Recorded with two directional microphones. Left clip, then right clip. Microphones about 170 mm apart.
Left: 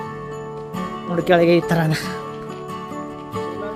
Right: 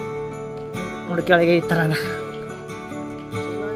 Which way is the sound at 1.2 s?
25° left (ahead or behind).